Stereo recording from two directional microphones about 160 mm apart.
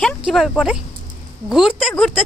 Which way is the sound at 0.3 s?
Centre (ahead or behind).